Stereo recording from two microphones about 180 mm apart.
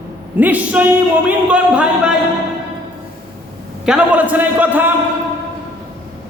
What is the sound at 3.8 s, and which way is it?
A man's voice, 5° right (ahead or behind).